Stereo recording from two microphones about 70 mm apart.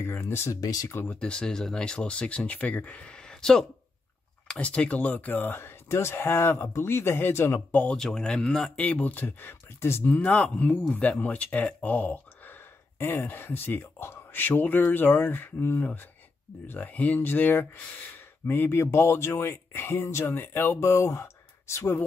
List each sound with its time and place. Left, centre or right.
0.0 s speech: left
0.6 s speech: left
0.8 s speech: left
1.2 s speech: centre
3.1 s speech: centre; by 7.8 s left
7.9 s speech: centre
8.7 s speech: left
10.2 s speech: centre; by 22.0 s left